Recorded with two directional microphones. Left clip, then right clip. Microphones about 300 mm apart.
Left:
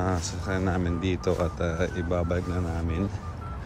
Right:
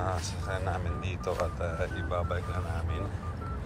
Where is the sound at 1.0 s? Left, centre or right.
Left.